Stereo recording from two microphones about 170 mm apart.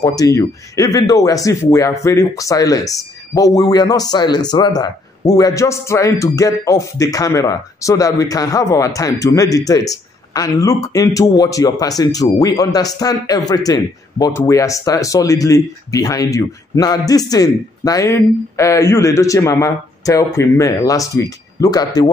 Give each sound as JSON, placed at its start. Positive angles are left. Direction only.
{"t": 0.0, "sound": "speech", "side_deg": 20}